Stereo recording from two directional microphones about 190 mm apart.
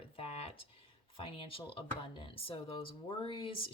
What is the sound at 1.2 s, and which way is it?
Speech, 30° left (ahead or behind).